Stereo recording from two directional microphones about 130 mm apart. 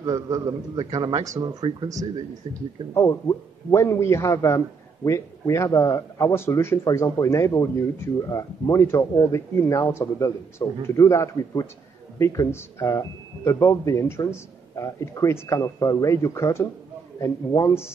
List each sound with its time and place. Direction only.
0.0 s a man's voice: 25° right (ahead or behind)
2.9 s a man's voice: 25° left (ahead or behind)